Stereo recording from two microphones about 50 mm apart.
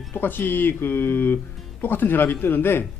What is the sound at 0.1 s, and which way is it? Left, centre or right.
A man's voice, left.